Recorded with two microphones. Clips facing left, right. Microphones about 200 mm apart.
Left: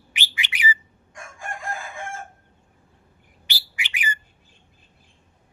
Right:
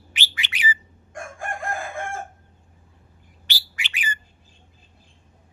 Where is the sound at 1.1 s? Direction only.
55° right (ahead or behind).